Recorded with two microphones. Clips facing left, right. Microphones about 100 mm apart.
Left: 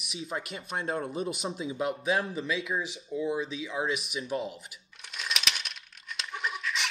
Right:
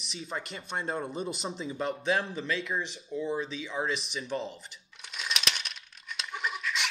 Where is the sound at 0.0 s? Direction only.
5° left (ahead or behind).